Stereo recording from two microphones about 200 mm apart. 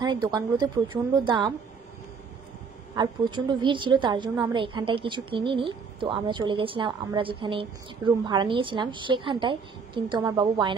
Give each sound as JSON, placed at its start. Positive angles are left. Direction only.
{"t": 0.0, "sound": "a woman's voice", "side_deg": -20}
{"t": 3.0, "sound": "a woman's voice", "side_deg": -25}